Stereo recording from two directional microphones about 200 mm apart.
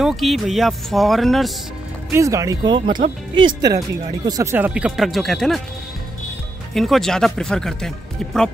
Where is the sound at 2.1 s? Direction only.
15° right (ahead or behind); by 5.6 s centre (ahead or behind).